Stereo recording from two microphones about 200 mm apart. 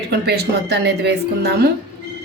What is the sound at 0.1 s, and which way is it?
A woman's voice, 55° right (ahead or behind).